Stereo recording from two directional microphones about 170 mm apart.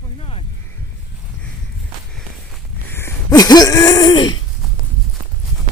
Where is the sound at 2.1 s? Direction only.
Centre (ahead or behind).